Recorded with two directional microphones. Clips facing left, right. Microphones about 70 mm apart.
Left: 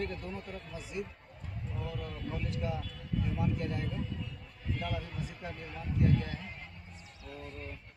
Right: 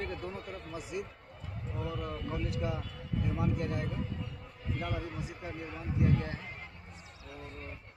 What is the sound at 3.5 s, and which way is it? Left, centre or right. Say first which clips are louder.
Speech: right 1 dB; right.